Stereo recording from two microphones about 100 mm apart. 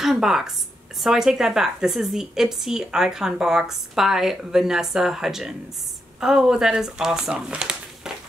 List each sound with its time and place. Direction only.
0.0 s a woman's voice: 5° right (ahead or behind)